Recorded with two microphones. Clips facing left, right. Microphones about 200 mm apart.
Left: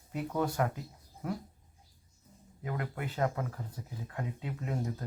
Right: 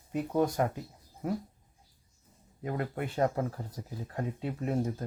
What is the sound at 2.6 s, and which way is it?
Speech, 30° right (ahead or behind).